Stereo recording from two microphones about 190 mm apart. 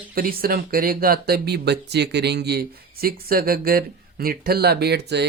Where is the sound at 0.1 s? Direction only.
50° right (ahead or behind).